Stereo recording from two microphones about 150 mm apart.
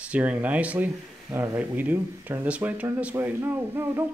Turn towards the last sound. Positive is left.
turn(degrees=-15)  # may be behind; listen again after turning